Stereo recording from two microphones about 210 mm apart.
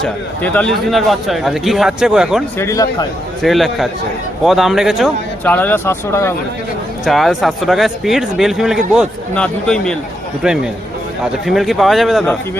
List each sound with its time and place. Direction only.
0.0 s speech: 5° left (ahead or behind)
2.6 s speech: 15° left (ahead or behind)
3.4 s speech: centre (ahead or behind)
5.5 s speech: 10° left (ahead or behind)
7.0 s speech: centre (ahead or behind)